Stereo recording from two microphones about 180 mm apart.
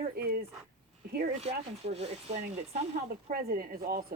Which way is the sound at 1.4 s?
35° right (ahead or behind).